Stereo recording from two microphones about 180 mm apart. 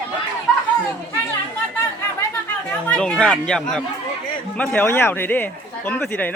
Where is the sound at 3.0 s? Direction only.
5° left (ahead or behind).